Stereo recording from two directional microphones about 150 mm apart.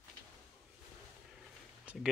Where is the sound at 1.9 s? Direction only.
10° right (ahead or behind).